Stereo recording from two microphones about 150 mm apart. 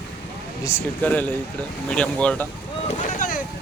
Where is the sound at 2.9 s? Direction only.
55° left (ahead or behind).